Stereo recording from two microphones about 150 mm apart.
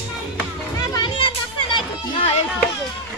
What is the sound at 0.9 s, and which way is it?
Music, 35° left (ahead or behind).